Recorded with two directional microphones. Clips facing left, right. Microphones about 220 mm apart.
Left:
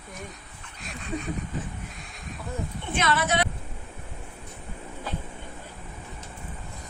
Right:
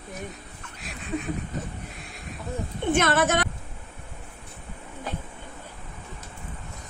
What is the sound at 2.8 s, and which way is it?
Speech, 50° right (ahead or behind).